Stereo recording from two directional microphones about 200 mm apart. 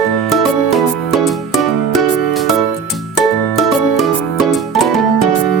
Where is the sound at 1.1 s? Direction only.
Centre (ahead or behind).